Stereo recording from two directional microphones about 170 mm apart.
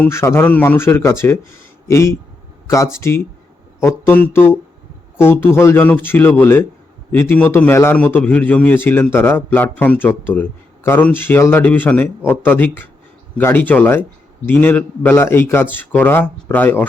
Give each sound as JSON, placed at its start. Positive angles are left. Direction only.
{"t": 0.0, "sound": "a man's voice", "side_deg": 15}